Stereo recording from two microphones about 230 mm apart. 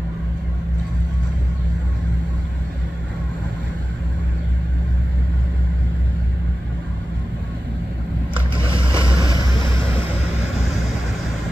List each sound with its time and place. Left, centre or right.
8.4 s vehicle: right